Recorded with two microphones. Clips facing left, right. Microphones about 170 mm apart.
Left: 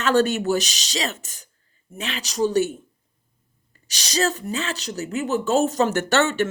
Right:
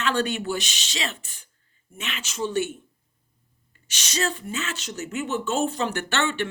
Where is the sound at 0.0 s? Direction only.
45° left (ahead or behind).